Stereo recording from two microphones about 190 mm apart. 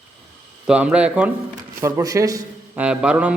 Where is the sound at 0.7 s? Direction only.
5° right (ahead or behind).